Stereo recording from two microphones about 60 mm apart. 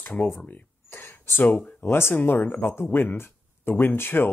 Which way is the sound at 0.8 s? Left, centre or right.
Left.